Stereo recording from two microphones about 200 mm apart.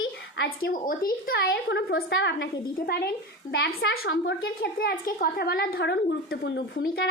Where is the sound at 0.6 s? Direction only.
45° left (ahead or behind).